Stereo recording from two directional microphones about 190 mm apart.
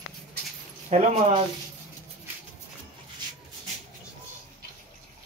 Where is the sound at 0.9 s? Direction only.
40° right (ahead or behind).